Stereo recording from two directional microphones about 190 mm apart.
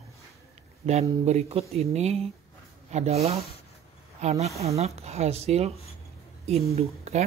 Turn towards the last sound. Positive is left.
turn(degrees=-35)  # may be behind; listen again after turning